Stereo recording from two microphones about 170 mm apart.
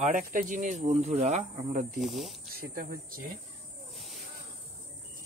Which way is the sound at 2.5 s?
60° right (ahead or behind).